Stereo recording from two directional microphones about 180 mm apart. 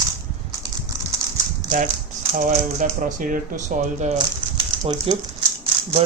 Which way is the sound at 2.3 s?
45° right (ahead or behind).